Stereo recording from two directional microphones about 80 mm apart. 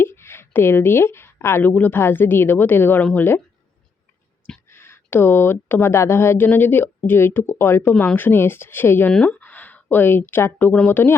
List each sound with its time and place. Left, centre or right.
0.0 s a woman's voice: left
4.7 s a woman's voice: left